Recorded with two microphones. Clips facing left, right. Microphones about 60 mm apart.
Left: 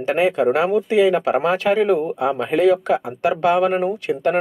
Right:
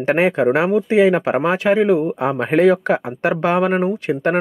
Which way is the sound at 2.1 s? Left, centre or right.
Right.